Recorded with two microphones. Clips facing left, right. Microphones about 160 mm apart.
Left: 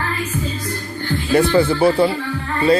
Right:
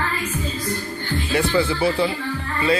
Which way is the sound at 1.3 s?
45° left (ahead or behind).